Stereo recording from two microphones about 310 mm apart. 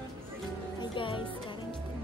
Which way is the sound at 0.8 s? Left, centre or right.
Centre.